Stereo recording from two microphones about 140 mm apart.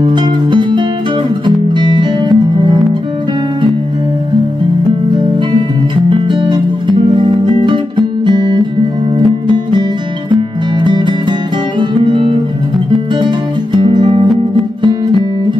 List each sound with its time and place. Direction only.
0.0 s music: 30° right (ahead or behind)
6.0 s music: 35° right (ahead or behind)
13.7 s music: 35° right (ahead or behind)
14.8 s guitar: 35° right (ahead or behind)